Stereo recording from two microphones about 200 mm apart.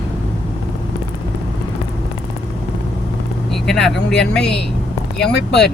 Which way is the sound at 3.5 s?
Centre (ahead or behind).